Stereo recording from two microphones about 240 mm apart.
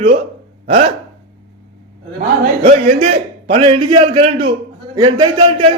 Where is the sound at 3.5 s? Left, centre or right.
Right.